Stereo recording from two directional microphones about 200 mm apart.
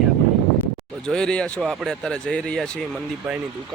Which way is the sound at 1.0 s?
5° left (ahead or behind).